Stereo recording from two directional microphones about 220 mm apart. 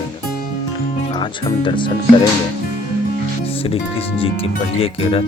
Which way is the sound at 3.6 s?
25° left (ahead or behind).